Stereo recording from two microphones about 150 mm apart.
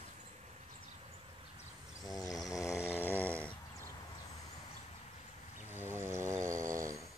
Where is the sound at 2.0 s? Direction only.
25° left (ahead or behind).